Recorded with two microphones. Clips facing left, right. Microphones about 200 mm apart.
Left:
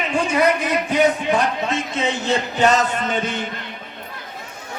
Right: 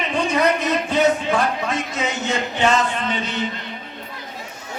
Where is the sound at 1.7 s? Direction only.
30° left (ahead or behind); by 3.4 s 50° left (ahead or behind).